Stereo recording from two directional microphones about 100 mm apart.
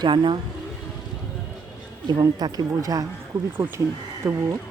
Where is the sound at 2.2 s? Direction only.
40° right (ahead or behind).